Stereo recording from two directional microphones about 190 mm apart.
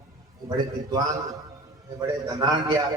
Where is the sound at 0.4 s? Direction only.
20° right (ahead or behind).